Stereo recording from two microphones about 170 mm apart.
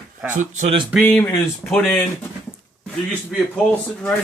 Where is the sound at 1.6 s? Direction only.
Centre (ahead or behind).